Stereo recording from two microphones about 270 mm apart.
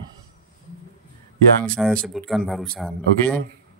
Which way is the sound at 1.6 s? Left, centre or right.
Centre.